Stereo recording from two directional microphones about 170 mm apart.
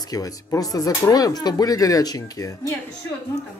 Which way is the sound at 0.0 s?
20° left (ahead or behind).